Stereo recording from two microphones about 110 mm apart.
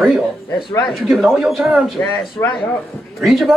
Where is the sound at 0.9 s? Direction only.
Centre (ahead or behind).